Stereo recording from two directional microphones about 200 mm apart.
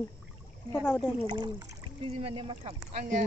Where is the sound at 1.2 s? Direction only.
20° right (ahead or behind).